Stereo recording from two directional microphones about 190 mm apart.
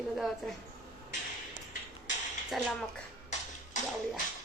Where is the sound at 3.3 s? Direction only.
40° left (ahead or behind).